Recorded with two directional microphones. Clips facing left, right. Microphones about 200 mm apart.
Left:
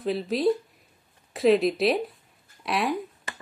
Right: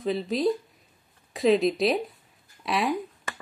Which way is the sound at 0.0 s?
Centre (ahead or behind).